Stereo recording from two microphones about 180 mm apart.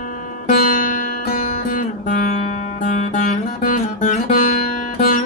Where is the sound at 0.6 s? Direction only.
50° left (ahead or behind).